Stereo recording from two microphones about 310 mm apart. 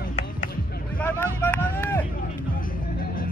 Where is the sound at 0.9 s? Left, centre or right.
Centre.